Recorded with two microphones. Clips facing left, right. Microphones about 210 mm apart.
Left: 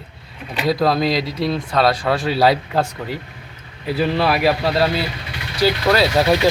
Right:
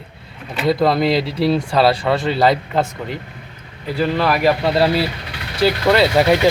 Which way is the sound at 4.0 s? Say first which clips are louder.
Right 1 dB; 10° left (ahead or behind).